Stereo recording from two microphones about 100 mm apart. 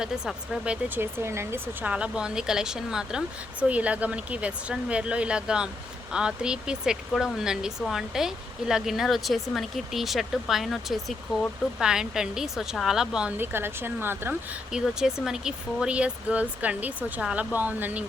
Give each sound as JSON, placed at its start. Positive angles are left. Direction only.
{"t": 0.0, "sound": "speech", "side_deg": -5}
{"t": 0.9, "sound": "speech", "side_deg": -25}
{"t": 1.9, "sound": "speech", "side_deg": -10}
{"t": 13.4, "sound": "speech", "side_deg": -20}
{"t": 14.7, "sound": "speech", "side_deg": -5}